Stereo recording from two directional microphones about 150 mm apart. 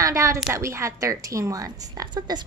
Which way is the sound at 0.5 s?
20° right (ahead or behind).